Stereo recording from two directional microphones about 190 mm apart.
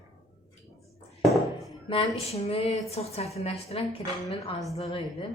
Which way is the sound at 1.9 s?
30° left (ahead or behind).